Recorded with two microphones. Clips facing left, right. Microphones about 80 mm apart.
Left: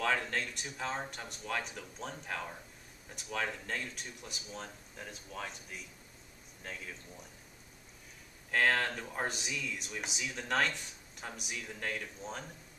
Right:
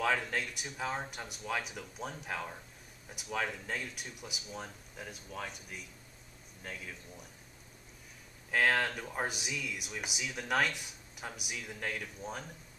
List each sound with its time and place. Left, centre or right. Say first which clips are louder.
0.0 s speech: right 1 dB; centre
8.5 s speech: right 1 dB; centre